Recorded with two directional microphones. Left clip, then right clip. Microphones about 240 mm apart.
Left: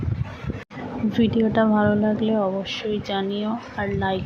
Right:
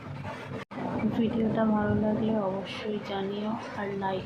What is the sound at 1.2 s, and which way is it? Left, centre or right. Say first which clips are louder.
A woman's voice: left 9 dB; left.